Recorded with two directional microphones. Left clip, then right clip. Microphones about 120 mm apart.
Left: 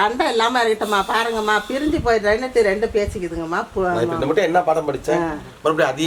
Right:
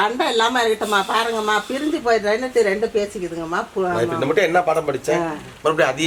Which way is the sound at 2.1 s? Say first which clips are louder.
Left 1 dB; 25° left (ahead or behind).